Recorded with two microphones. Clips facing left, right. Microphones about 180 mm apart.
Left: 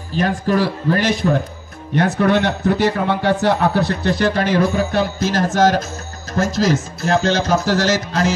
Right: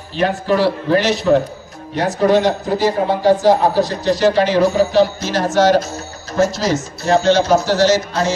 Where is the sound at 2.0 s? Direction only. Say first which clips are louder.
Right 2 dB; 60° left (ahead or behind).